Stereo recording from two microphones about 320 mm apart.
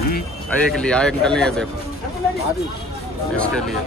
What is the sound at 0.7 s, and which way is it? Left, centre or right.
Speech, centre.